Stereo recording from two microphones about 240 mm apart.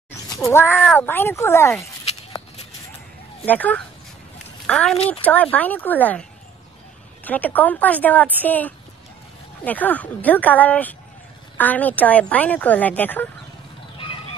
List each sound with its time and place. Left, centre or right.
0.3 s a woman's voice: centre
3.4 s a woman's voice: centre
4.9 s speech: left
5.2 s a woman's voice: centre
7.2 s a woman's voice: centre